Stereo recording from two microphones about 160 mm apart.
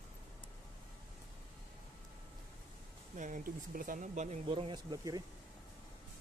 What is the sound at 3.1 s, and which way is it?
Speech, 55° right (ahead or behind).